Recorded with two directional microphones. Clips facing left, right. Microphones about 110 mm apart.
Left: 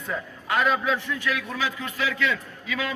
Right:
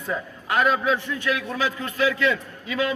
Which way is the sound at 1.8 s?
40° right (ahead or behind).